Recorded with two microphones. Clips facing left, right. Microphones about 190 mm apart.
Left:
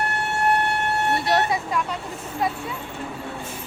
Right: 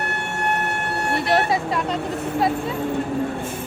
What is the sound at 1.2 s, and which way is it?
Speech, 25° right (ahead or behind).